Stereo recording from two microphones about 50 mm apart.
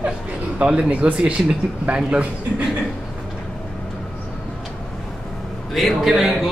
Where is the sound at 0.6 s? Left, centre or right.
Right.